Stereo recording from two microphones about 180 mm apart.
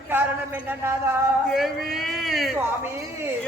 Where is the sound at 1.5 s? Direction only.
Centre (ahead or behind).